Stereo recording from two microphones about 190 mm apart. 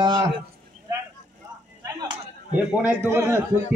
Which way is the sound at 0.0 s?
25° right (ahead or behind).